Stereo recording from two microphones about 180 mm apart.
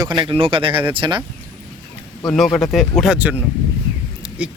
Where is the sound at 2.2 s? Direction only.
Centre (ahead or behind).